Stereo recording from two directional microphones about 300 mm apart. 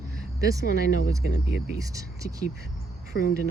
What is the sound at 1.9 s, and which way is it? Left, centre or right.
Speech, centre.